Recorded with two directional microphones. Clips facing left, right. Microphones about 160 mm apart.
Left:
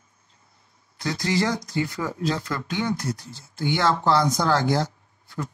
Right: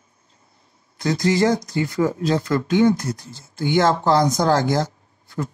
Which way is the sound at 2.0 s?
25° right (ahead or behind).